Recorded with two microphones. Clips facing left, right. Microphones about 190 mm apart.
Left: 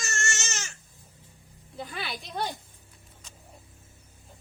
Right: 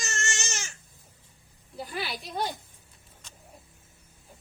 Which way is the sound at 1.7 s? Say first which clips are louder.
Right 2 dB; 5° right (ahead or behind).